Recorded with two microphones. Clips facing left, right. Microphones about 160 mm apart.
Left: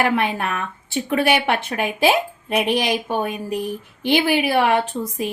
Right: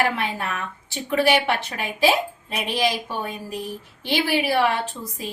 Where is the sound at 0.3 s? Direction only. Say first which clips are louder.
Left 4 dB; 55° left (ahead or behind).